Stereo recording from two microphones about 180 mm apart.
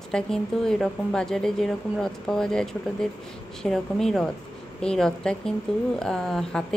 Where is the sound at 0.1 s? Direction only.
5° left (ahead or behind).